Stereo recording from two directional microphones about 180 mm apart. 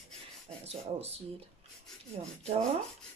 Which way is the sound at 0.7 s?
35° right (ahead or behind).